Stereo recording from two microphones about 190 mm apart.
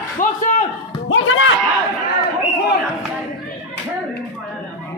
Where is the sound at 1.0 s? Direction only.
90° left.